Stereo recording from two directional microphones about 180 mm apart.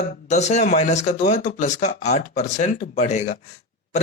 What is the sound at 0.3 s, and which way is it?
A man's voice, 40° left (ahead or behind).